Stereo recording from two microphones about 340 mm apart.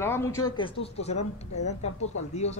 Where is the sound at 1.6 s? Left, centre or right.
Left.